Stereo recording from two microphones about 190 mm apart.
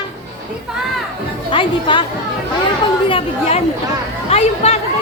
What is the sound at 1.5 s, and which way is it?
Music, 25° left (ahead or behind).